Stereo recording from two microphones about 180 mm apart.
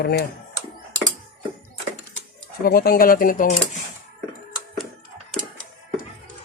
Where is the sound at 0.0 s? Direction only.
65° left (ahead or behind).